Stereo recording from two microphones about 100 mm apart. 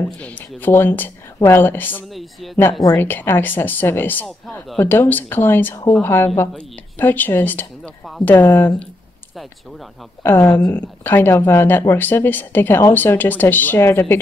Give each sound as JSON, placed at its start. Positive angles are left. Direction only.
{"t": 0.2, "sound": "a woman's voice", "side_deg": 15}
{"t": 2.0, "sound": "speech", "side_deg": 0}
{"t": 3.0, "sound": "a woman's voice", "side_deg": 20}
{"t": 4.3, "sound": "speech", "side_deg": 0}
{"t": 4.7, "sound": "a woman's voice", "side_deg": 20}
{"t": 9.3, "sound": "speech", "side_deg": 0}
{"t": 10.2, "sound": "a woman's voice", "side_deg": 20}